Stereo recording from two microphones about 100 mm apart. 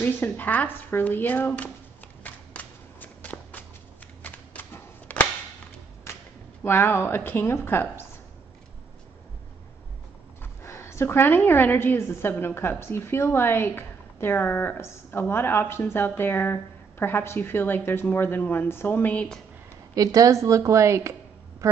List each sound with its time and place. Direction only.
0.0 s a woman's voice: 15° left (ahead or behind)
2.2 s a sound: 15° left (ahead or behind)
4.2 s cap gun: 15° left (ahead or behind)
6.1 s whip: 25° left (ahead or behind)
6.6 s a woman's voice: 25° left (ahead or behind)
10.4 s a woman's voice: 25° left (ahead or behind)
20.0 s a woman's voice: 35° right (ahead or behind)